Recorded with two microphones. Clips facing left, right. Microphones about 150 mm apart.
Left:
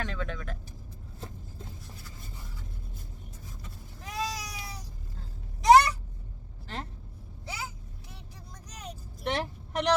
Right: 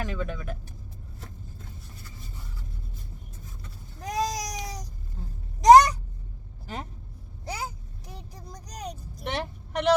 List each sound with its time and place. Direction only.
0.0 s vehicle: 10° right (ahead or behind)
4.0 s a sound: 40° right (ahead or behind)
7.4 s vehicle: 40° right (ahead or behind)
9.2 s vehicle: centre (ahead or behind)